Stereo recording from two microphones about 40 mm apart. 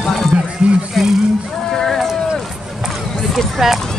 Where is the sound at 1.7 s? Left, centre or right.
Centre.